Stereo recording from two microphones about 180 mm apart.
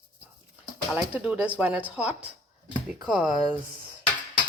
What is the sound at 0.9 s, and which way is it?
Speech, 5° right (ahead or behind).